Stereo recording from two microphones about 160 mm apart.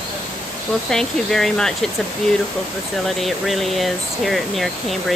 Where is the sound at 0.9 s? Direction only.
5° left (ahead or behind).